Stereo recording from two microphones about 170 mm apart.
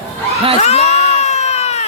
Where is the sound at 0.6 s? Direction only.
40° left (ahead or behind).